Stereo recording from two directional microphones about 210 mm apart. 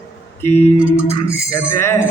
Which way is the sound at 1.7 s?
10° left (ahead or behind).